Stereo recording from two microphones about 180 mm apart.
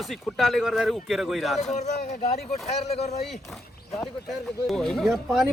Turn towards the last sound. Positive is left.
turn(degrees=0)  # may be behind; listen again after turning